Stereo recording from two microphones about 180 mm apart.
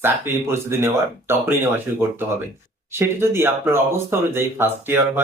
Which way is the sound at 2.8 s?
15° right (ahead or behind).